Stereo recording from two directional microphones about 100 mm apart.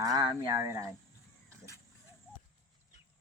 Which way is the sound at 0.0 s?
45° right (ahead or behind).